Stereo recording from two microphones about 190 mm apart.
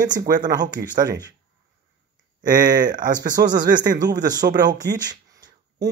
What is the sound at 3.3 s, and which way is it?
Speech, 20° right (ahead or behind).